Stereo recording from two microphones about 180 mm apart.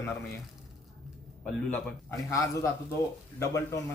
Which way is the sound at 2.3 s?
15° left (ahead or behind).